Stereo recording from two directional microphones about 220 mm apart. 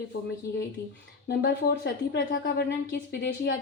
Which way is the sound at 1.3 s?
45° left (ahead or behind).